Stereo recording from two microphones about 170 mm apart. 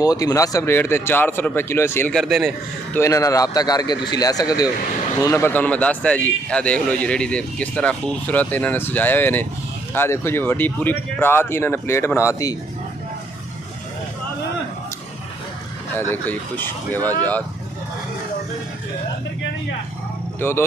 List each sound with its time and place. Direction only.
0.0 s a man's voice: 20° left (ahead or behind)
2.1 s a man's voice: centre (ahead or behind)
3.0 s a man's voice: 20° left (ahead or behind)
16.0 s a man's voice: 10° left (ahead or behind)
20.3 s speech: 15° left (ahead or behind)